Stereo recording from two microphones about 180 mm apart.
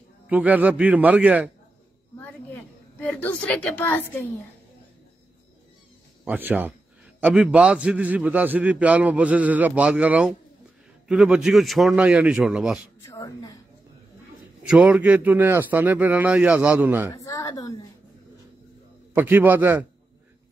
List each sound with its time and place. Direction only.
0.3 s a man's voice: 10° right (ahead or behind)
2.1 s a woman's voice: 10° left (ahead or behind)
6.2 s a man's voice: 10° right (ahead or behind)
13.0 s a sound: 15° left (ahead or behind)
14.7 s a man's voice: 5° right (ahead or behind)
17.1 s a woman's voice: 20° left (ahead or behind)
19.1 s a man's voice: 10° right (ahead or behind)